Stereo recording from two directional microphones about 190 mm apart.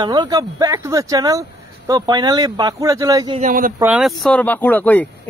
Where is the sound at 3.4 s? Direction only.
45° right (ahead or behind).